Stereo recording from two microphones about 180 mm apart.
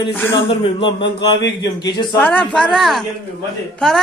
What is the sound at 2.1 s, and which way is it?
Speech, 10° left (ahead or behind).